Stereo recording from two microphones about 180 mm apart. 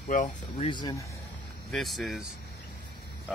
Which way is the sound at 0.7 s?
25° left (ahead or behind).